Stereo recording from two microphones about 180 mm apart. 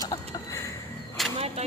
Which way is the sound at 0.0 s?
20° left (ahead or behind).